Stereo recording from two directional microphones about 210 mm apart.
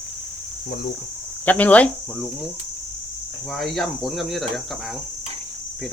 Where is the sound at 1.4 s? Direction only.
5° left (ahead or behind).